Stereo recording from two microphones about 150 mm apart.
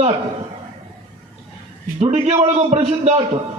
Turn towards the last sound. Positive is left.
turn(degrees=-45)  # may be behind; listen again after turning